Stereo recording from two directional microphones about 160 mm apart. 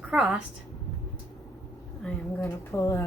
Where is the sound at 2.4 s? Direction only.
20° left (ahead or behind).